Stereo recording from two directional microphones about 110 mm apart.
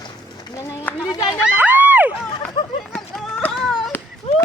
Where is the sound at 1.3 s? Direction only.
15° right (ahead or behind).